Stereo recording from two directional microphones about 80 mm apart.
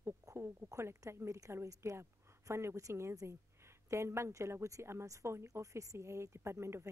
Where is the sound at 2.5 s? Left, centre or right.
Right.